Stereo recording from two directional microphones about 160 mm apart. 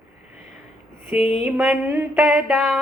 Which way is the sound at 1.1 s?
40° left (ahead or behind).